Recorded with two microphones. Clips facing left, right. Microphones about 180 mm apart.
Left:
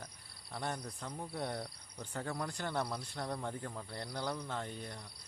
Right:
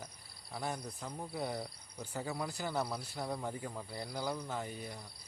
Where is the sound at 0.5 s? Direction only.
5° right (ahead or behind).